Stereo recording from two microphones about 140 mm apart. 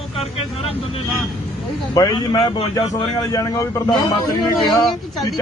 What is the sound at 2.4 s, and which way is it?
Speech, 40° left (ahead or behind).